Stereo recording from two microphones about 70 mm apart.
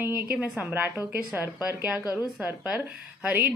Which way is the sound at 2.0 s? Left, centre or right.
Left.